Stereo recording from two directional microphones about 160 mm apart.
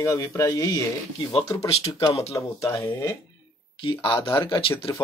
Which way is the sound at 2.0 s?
20° left (ahead or behind).